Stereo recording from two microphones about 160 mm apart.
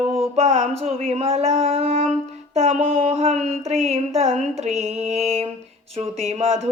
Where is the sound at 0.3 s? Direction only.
45° right (ahead or behind).